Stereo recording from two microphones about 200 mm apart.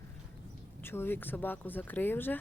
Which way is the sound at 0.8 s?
10° left (ahead or behind).